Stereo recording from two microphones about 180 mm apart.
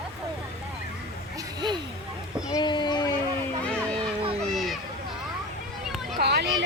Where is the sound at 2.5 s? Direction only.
25° left (ahead or behind).